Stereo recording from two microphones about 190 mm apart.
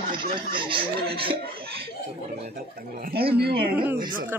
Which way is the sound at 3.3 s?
55° right (ahead or behind).